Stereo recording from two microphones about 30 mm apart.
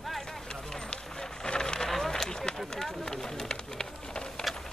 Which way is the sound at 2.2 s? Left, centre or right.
Left.